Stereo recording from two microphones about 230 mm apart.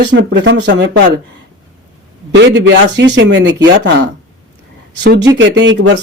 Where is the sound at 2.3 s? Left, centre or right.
Right.